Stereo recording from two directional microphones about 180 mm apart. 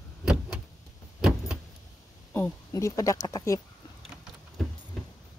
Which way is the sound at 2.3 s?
15° left (ahead or behind).